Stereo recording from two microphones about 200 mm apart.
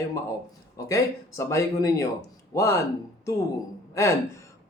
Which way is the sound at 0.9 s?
15° left (ahead or behind).